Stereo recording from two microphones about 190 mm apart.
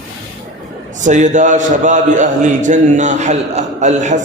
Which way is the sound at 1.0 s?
40° right (ahead or behind).